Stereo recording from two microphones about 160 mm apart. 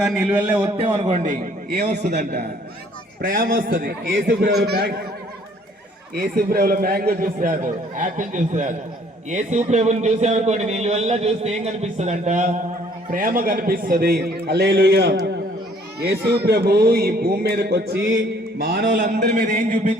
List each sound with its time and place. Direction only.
0.0 s a man's voice: 5° right (ahead or behind)
0.8 s a man's voice: 45° right (ahead or behind); by 1.9 s 65° right (ahead or behind)
2.0 s a man's voice: 90° right
3.2 s a man's voice: 65° right (ahead or behind); by 4.9 s 85° right
6.1 s a man's voice: 70° right (ahead or behind); by 12.5 s 50° right (ahead or behind)
13.1 s a man's voice: 60° right (ahead or behind); by 15.4 s 90° right
16.5 s music: 85° right
18.6 s music: 75° right (ahead or behind)
19.5 s a man's voice: 55° right (ahead or behind)